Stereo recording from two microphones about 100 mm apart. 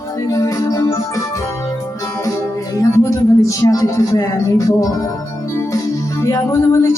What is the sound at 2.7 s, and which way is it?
Speech, 30° left (ahead or behind).